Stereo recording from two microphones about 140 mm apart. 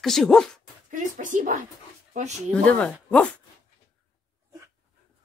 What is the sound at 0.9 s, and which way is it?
Speech, 65° right (ahead or behind).